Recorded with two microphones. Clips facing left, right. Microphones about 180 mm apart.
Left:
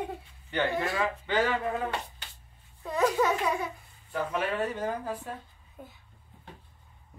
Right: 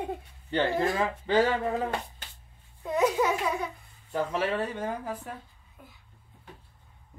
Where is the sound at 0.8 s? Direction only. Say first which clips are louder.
Right 3 dB; 45° right (ahead or behind).